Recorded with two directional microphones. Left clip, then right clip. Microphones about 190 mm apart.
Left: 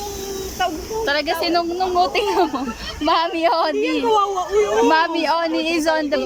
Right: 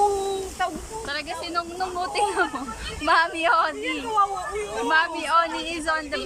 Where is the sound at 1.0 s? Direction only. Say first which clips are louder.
Left 11 dB; 45° left (ahead or behind).